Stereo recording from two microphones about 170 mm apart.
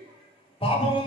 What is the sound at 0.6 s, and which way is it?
Speech, 35° left (ahead or behind).